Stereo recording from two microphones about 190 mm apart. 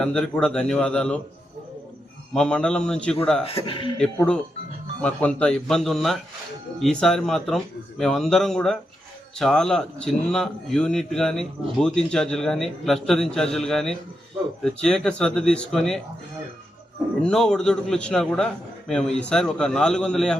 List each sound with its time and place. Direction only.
0.0 s a man's voice: 5° left (ahead or behind)
2.3 s a man's voice: 5° left (ahead or behind)
3.4 s speech: 30° left (ahead or behind)
4.9 s a man's voice: 5° left (ahead or behind)
17.2 s a man's voice: 5° left (ahead or behind)